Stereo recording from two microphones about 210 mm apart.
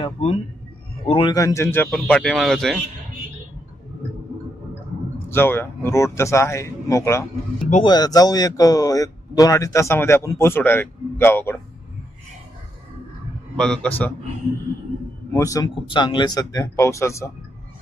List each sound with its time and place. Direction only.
0.0 s speech: 30° left (ahead or behind); by 2.8 s centre (ahead or behind)
5.3 s speech: 10° left (ahead or behind)
7.7 s speech: 25° left (ahead or behind)
13.6 s speech: 5° left (ahead or behind)
15.3 s speech: 15° left (ahead or behind)